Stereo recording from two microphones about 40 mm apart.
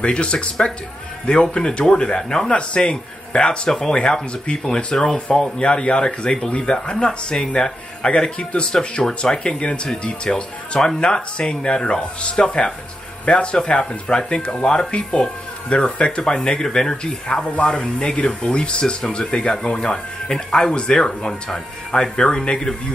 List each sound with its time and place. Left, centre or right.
0.0 s speech: left
2.5 s speech: left